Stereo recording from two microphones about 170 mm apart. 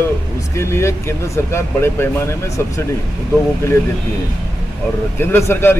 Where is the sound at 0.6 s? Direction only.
15° left (ahead or behind).